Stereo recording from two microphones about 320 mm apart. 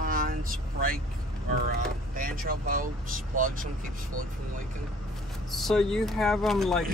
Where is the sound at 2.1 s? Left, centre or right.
Right.